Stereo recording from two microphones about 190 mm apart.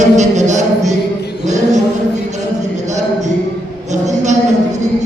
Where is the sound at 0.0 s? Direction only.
40° right (ahead or behind).